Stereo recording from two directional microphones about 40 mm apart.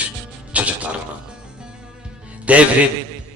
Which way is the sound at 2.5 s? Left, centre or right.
Right.